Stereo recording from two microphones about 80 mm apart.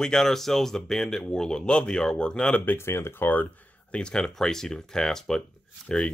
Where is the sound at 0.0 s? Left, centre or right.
Centre.